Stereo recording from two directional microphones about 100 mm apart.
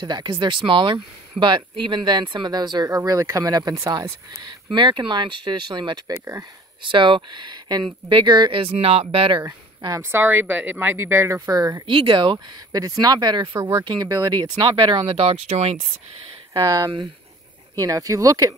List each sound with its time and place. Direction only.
0.0 s speech: 50° right (ahead or behind)
3.0 s speech: 30° right (ahead or behind); by 9.0 s 80° right
9.0 s speech: 60° right (ahead or behind)
9.8 s speech: 30° right (ahead or behind)
11.9 s speech: 55° right (ahead or behind)
12.7 s speech: 40° right (ahead or behind)
15.0 s speech: 75° right (ahead or behind)
16.5 s speech: 40° right (ahead or behind)